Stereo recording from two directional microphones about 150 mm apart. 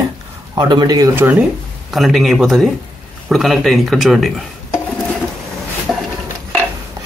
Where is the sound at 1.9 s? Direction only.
Centre (ahead or behind).